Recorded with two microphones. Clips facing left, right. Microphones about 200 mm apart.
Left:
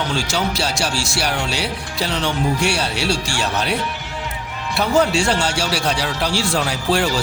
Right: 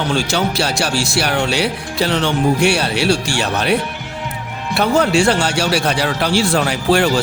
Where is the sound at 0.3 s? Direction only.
60° right (ahead or behind).